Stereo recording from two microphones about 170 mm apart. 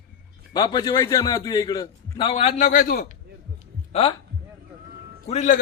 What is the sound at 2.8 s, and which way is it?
Speech, 65° left (ahead or behind).